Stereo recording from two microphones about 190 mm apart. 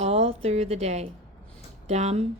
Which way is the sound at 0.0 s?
35° right (ahead or behind).